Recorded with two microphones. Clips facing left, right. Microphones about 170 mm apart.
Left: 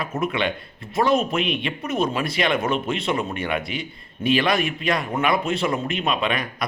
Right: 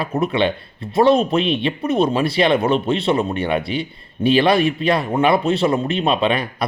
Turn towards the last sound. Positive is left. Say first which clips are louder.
# right 5 dB
turn(degrees=-30)  # may be behind; listen again after turning